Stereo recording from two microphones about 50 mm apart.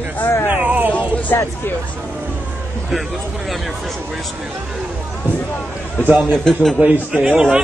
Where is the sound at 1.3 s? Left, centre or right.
Left.